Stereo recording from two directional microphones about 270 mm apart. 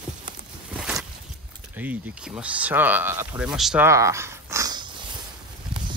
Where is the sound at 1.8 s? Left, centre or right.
Centre.